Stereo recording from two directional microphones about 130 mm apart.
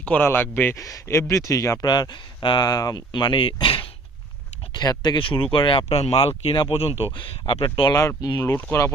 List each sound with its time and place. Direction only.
0.0 s speech: 15° left (ahead or behind); by 7.9 s 40° left (ahead or behind)
7.9 s speech: 25° left (ahead or behind)
8.5 s speech: 15° left (ahead or behind)